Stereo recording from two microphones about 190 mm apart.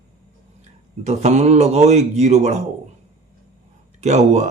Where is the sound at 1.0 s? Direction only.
35° right (ahead or behind).